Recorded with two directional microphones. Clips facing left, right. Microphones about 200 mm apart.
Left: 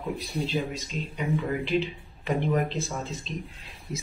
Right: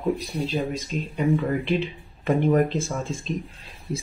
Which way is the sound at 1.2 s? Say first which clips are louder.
Right 5 dB; 50° right (ahead or behind).